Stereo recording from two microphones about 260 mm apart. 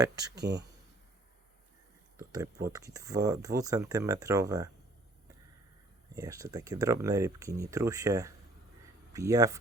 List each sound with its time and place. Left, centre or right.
0.3 s speech: right
2.1 s speech: centre
6.1 s speech: centre